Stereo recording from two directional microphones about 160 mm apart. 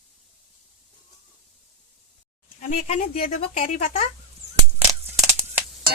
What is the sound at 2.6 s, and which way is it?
Speech, 45° left (ahead or behind).